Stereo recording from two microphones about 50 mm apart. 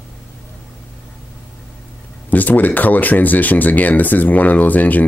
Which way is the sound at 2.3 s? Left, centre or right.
Left.